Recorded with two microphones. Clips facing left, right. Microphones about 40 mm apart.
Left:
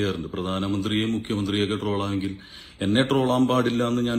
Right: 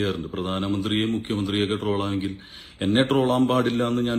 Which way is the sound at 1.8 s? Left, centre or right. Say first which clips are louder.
Right 1 dB; right.